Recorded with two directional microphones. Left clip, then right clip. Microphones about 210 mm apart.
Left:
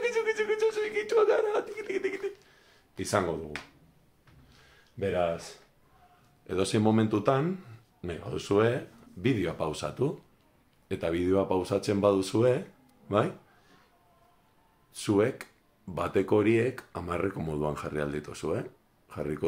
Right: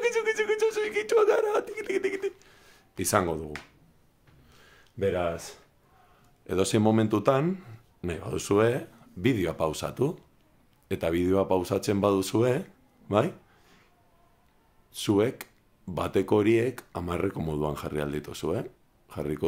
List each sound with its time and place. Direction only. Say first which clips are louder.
0.0 s a sound: right 2 dB; 40° right (ahead or behind)
3.0 s speech: right 3 dB; 45° right (ahead or behind)
4.9 s speech: right 1 dB; 50° right (ahead or behind)
6.4 s speech: right 2 dB; 35° right (ahead or behind)
13.1 s a sound: right 2 dB; 35° right (ahead or behind)
14.9 s speech: right 1 dB; 30° right (ahead or behind)